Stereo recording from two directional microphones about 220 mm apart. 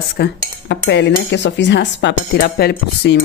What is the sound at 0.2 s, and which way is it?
Speech, 50° left (ahead or behind).